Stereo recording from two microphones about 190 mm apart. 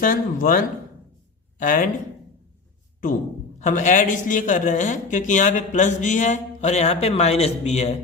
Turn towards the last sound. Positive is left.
turn(degrees=35)  # may be behind; listen again after turning